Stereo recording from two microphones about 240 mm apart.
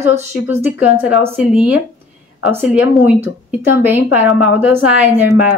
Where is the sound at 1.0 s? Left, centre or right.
Centre.